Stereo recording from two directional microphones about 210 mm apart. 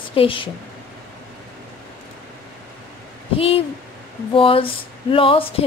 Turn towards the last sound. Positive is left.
turn(degrees=25)  # may be behind; listen again after turning